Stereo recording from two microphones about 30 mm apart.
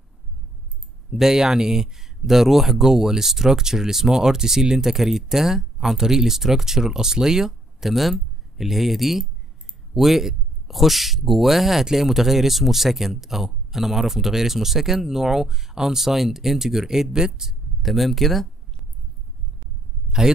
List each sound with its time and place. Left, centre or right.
1.1 s speech: centre
7.8 s speech: centre
17.8 s speech: centre
20.1 s a sound: right